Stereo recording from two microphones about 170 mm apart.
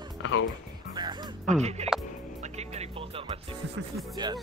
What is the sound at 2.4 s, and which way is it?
Music, 40° right (ahead or behind).